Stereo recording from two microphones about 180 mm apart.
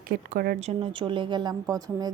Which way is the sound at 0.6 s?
35° right (ahead or behind).